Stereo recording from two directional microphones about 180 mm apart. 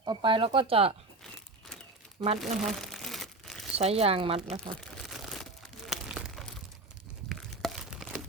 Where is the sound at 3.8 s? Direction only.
35° right (ahead or behind).